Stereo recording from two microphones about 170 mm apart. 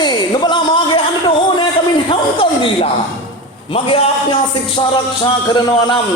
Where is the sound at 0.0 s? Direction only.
25° left (ahead or behind).